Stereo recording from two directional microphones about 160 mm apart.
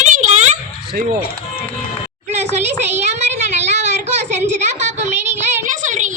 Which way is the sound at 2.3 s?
45° right (ahead or behind).